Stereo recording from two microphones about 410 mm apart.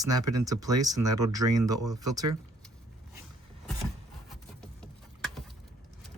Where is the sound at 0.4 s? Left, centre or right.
Centre.